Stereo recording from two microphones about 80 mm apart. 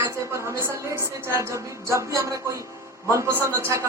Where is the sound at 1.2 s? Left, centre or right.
Right.